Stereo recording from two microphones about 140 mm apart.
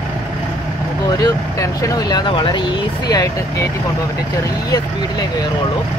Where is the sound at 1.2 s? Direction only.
25° left (ahead or behind).